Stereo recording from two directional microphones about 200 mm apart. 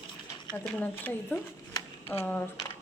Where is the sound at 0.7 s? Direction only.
10° left (ahead or behind).